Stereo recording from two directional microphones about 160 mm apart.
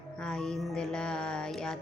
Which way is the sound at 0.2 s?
5° left (ahead or behind).